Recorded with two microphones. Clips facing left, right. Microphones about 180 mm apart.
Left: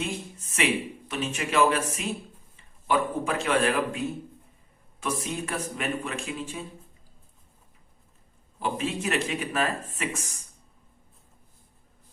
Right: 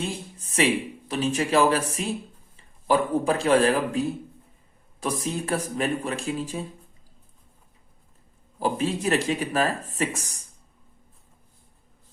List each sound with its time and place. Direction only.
0.0 s a man's voice: 35° right (ahead or behind)
8.5 s speech: 35° right (ahead or behind)